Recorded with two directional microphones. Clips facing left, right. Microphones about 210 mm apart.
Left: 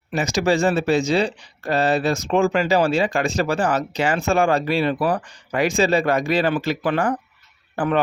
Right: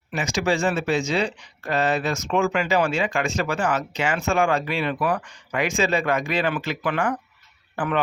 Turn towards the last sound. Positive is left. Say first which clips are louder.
# left 4 dB
turn(degrees=35)  # may be behind; listen again after turning